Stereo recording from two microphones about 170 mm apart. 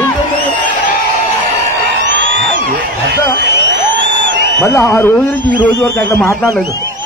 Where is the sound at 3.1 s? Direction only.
85° right.